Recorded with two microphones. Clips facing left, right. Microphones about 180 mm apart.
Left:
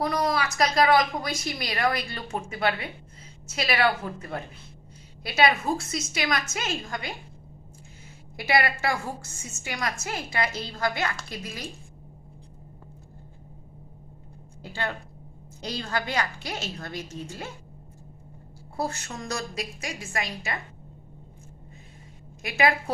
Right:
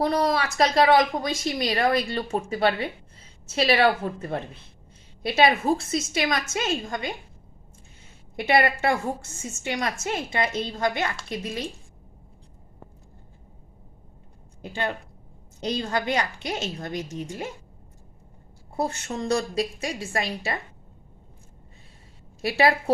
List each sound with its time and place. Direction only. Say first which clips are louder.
0.0 s a woman's voice: right 3 dB; 30° right (ahead or behind)
8.4 s a woman's voice: right 4 dB; 25° right (ahead or behind)
14.6 s a woman's voice: right 3 dB; 20° right (ahead or behind)
18.8 s a woman's voice: right 4 dB; 25° right (ahead or behind)
22.4 s a woman's voice: right 3 dB; 30° right (ahead or behind)